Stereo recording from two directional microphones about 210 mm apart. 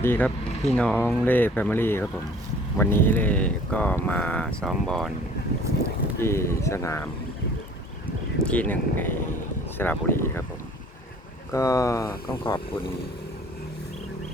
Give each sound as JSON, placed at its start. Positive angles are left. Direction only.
{"t": 0.0, "sound": "speech", "side_deg": 10}
{"t": 6.1, "sound": "speech", "side_deg": 10}
{"t": 8.4, "sound": "speech", "side_deg": 5}
{"t": 11.5, "sound": "speech", "side_deg": 15}